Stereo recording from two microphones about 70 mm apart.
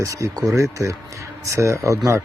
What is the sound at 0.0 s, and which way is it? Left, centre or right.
Speech, right.